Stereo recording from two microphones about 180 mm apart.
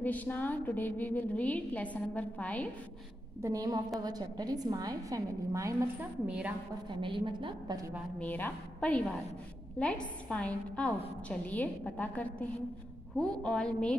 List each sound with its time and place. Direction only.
0.0 s a woman's voice: 10° left (ahead or behind)
3.4 s a woman's voice: 20° right (ahead or behind)
6.2 s a woman's voice: 5° right (ahead or behind)
6.9 s a woman's voice: 30° right (ahead or behind)
8.2 s a woman's voice: 10° left (ahead or behind)
10.3 s a woman's voice: 5° left (ahead or behind)